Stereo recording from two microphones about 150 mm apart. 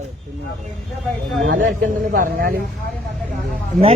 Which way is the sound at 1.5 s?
65° right (ahead or behind).